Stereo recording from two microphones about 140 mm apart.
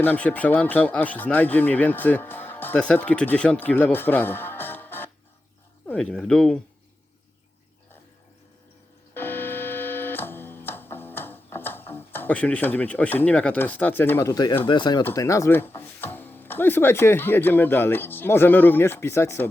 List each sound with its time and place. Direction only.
0.0 s speech: 15° left (ahead or behind)
9.1 s music: 15° left (ahead or behind)
14.7 s speech: 30° left (ahead or behind)